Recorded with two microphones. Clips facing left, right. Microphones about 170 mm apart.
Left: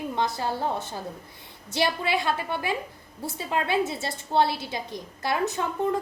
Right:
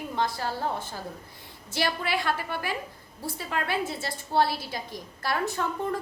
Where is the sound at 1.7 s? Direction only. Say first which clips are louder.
Left 3 dB; 20° left (ahead or behind).